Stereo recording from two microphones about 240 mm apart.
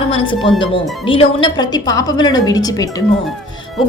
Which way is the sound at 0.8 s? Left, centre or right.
Centre.